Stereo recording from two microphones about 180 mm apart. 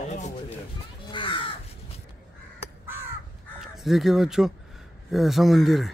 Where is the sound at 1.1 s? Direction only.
30° left (ahead or behind).